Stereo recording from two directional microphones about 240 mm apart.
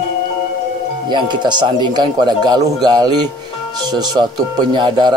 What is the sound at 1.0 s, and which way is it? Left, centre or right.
Speech, centre.